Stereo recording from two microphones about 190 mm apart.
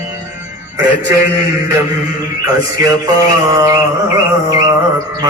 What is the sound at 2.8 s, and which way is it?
Mantra, 20° right (ahead or behind).